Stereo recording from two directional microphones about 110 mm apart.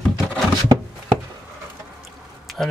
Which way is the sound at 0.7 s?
35° right (ahead or behind).